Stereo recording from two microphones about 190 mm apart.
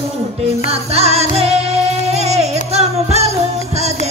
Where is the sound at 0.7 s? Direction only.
35° right (ahead or behind).